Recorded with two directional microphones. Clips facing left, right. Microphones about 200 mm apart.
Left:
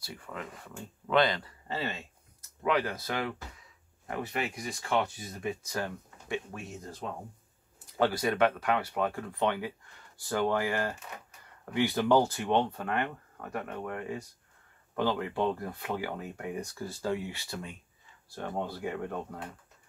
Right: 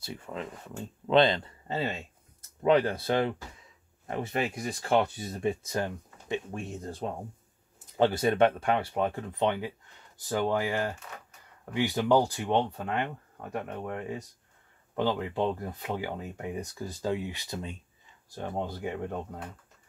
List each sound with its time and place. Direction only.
0.0 s speech: 25° right (ahead or behind)
4.3 s speech: 40° right (ahead or behind); by 19.4 s 20° right (ahead or behind)